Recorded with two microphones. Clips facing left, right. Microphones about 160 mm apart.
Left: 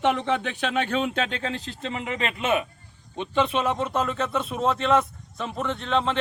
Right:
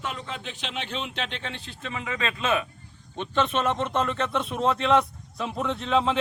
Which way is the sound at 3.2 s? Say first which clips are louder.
Left 1 dB; 10° left (ahead or behind).